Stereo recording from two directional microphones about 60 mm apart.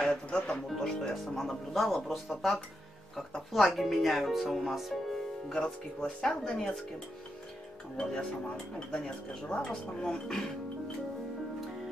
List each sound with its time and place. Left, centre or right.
0.0 s speech: centre
8.0 s speech: centre